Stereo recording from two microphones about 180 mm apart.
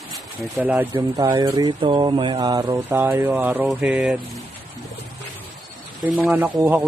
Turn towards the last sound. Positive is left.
turn(degrees=-10)  # may be behind; listen again after turning